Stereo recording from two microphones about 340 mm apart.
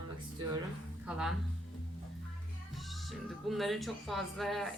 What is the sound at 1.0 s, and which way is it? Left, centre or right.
Speech, centre.